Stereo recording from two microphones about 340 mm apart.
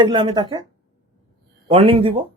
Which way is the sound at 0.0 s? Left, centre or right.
Centre.